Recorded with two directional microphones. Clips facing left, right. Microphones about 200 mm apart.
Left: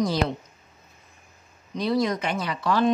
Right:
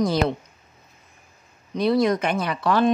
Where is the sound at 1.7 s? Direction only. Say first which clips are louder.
Right 4 dB; 60° right (ahead or behind).